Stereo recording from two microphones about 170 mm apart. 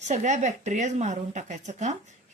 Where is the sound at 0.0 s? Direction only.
45° right (ahead or behind).